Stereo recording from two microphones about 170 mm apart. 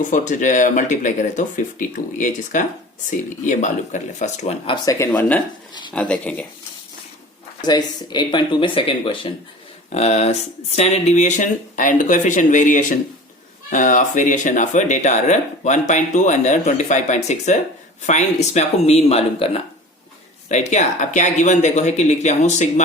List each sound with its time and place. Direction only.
0.0 s speech: 50° left (ahead or behind)
4.6 s speech: 25° left (ahead or behind)
4.9 s speech: 10° left (ahead or behind)
7.6 s speech: 25° left (ahead or behind); by 22.7 s 45° left (ahead or behind)